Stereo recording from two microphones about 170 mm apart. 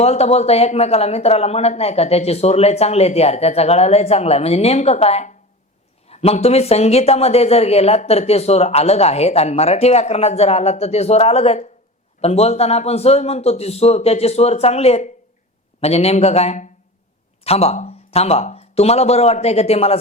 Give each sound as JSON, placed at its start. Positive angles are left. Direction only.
{"t": 0.0, "sound": "a woman's voice", "side_deg": 40}